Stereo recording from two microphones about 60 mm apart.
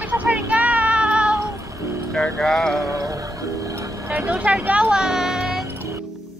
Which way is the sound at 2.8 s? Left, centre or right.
Right.